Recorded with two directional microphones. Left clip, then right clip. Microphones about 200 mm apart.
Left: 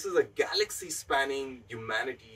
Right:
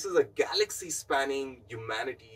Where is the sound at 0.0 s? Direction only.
5° left (ahead or behind).